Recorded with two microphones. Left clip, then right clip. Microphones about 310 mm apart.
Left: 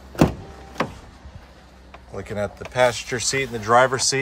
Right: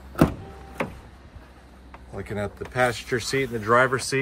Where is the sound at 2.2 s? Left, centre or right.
Centre.